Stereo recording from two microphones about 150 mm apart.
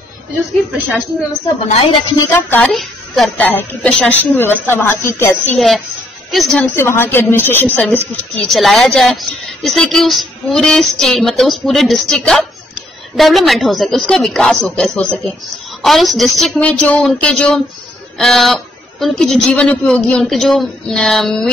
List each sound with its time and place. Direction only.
0.7 s a woman's voice: 10° right (ahead or behind)
1.7 s a woman's voice: 45° left (ahead or behind)
2.1 s a woman's voice: 15° left (ahead or behind)
2.6 s a woman's voice: centre (ahead or behind); by 5.3 s 15° left (ahead or behind)
6.3 s a woman's voice: 5° left (ahead or behind)
6.7 s a woman's voice: 15° left (ahead or behind)
8.5 s a woman's voice: centre (ahead or behind)